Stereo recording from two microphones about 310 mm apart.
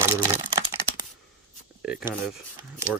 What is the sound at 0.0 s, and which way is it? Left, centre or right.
Computer keyboard, centre.